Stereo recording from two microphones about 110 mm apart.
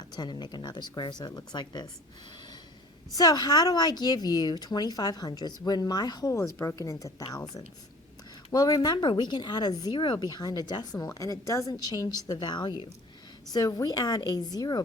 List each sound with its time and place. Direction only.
0.2 s speech: 40° left (ahead or behind)
3.2 s speech: 35° left (ahead or behind)